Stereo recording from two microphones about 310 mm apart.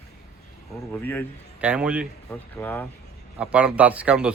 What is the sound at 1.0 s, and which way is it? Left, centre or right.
Speech, centre.